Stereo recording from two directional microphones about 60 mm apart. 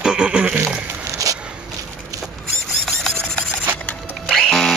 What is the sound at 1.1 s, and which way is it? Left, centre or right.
Walk, right.